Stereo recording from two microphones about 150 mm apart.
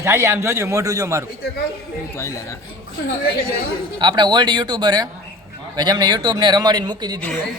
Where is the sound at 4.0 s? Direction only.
30° right (ahead or behind).